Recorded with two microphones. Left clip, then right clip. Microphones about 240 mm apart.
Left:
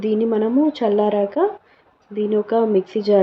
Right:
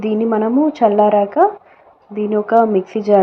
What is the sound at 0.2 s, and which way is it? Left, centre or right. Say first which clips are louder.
A woman's voice: right 5 dB; centre.